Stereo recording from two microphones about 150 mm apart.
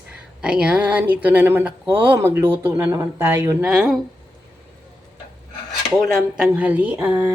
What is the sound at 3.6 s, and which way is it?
Speech, 5° right (ahead or behind).